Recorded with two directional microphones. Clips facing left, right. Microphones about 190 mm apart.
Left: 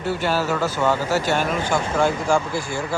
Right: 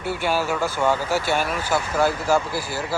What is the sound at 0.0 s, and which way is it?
Speech, 10° right (ahead or behind).